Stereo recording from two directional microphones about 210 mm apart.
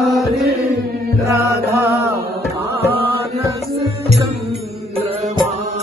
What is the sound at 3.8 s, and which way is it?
Music, 30° right (ahead or behind).